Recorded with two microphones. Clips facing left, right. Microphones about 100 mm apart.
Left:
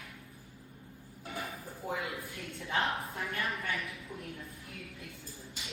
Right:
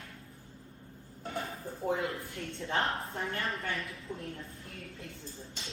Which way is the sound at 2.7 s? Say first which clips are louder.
Even; 30° right (ahead or behind).